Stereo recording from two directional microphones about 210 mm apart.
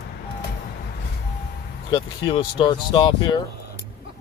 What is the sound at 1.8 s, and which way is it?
Speech, 25° left (ahead or behind).